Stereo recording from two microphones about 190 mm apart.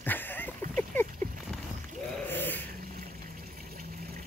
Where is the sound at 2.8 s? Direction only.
45° right (ahead or behind).